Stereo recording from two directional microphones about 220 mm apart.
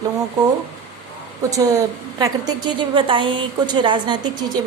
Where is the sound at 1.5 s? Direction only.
15° right (ahead or behind).